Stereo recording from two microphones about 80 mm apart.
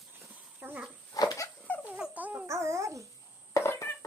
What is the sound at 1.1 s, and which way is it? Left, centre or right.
Dog, left.